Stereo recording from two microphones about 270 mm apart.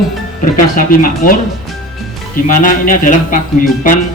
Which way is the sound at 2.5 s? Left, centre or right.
Left.